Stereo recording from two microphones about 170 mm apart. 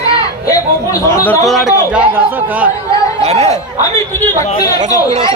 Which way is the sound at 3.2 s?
40° right (ahead or behind).